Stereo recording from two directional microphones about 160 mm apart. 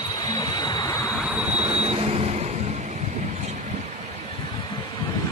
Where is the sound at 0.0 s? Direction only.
25° left (ahead or behind).